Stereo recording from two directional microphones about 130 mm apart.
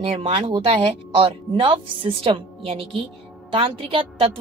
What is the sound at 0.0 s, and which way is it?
A woman's voice, 45° right (ahead or behind).